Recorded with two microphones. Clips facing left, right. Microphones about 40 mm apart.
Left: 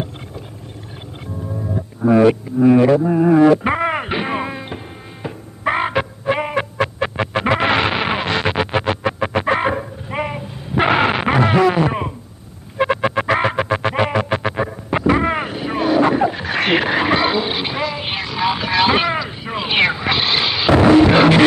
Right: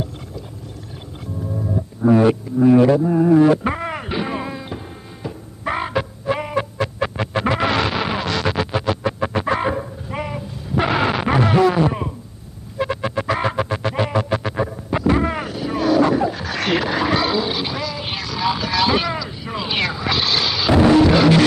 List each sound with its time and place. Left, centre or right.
1.8 s music: left
2.2 s speech: centre
3.5 s music: left